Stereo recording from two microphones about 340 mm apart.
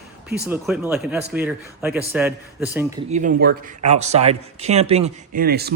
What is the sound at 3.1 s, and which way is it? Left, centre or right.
Speech, right.